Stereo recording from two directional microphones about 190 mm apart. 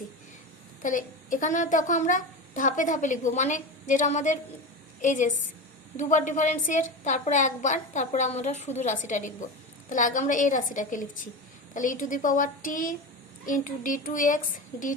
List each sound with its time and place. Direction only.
0.8 s a woman's voice: 45° left (ahead or behind)